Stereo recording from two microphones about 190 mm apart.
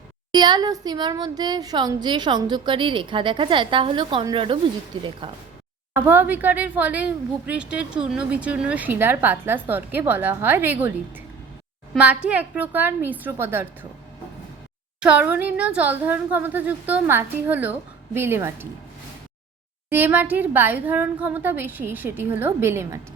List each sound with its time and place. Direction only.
0.3 s speech: 25° right (ahead or behind)
5.9 s speech: 10° right (ahead or behind)
15.0 s speech: 5° right (ahead or behind)
19.9 s speech: 10° right (ahead or behind)